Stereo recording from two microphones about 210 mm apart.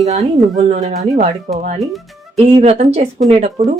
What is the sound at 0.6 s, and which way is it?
Speech, 35° right (ahead or behind).